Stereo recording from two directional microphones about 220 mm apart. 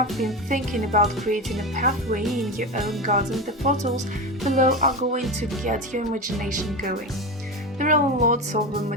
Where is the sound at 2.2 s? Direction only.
Centre (ahead or behind).